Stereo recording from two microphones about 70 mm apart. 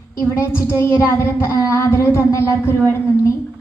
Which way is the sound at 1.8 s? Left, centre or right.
Left.